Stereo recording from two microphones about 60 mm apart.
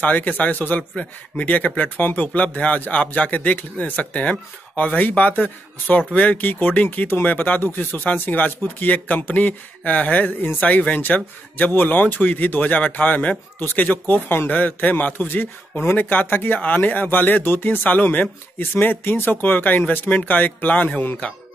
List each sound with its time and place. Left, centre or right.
0.0 s a man's voice: left